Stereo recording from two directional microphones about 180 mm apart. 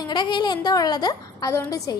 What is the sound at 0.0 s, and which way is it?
A woman's voice, 25° left (ahead or behind).